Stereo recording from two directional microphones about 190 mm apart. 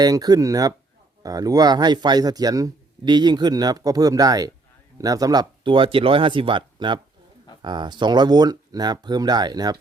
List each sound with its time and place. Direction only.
0.0 s speech: 20° right (ahead or behind)